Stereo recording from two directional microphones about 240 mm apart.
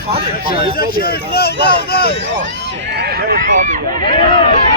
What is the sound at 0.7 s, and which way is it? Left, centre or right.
Speech, left.